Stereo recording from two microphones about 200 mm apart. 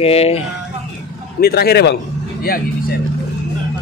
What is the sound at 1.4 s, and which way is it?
Speech, 50° left (ahead or behind).